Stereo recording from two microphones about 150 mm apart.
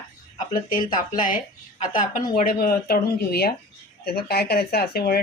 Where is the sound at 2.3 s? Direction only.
75° left (ahead or behind).